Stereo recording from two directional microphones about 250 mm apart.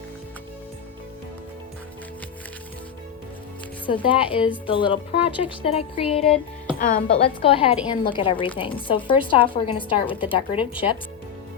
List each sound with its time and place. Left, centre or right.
3.8 s speech: centre